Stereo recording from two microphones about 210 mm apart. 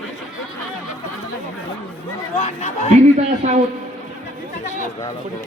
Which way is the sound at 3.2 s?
35° right (ahead or behind).